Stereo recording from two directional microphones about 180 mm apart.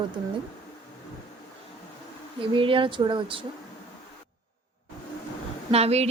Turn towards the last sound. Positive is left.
turn(degrees=-35)  # may be behind; listen again after turning